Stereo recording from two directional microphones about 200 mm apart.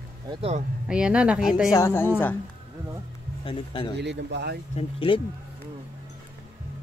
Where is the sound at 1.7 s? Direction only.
15° left (ahead or behind).